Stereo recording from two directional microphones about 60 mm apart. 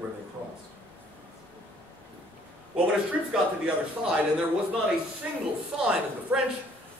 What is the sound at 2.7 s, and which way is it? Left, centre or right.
Speech, centre.